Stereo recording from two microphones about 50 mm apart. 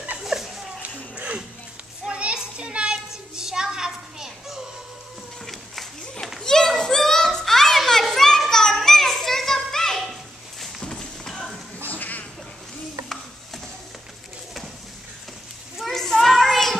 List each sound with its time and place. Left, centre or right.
0.2 s a sound: centre
1.1 s a sound: right
2.0 s children playing: right
3.1 s music: centre
6.4 s children playing: centre
10.8 s horse: centre
11.9 s cat: left
15.8 s children playing: centre